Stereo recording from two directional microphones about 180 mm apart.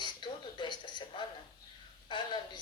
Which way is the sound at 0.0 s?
25° left (ahead or behind).